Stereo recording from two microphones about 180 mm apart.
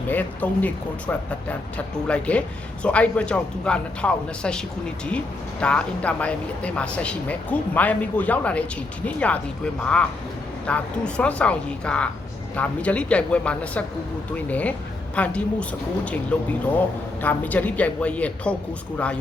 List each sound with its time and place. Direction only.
0.1 s a man's voice: 10° left (ahead or behind)